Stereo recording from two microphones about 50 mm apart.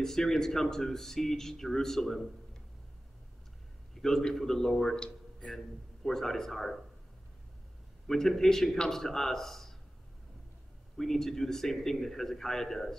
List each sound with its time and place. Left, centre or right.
0.0 s speech: centre
3.9 s a man's voice: centre
8.1 s speech: centre
11.0 s speech: centre